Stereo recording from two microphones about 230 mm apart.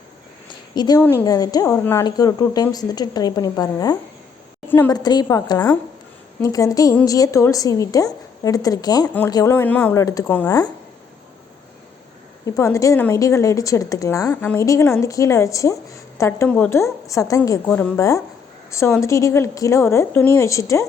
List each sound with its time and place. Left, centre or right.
0.8 s speech: centre
12.5 s speech: centre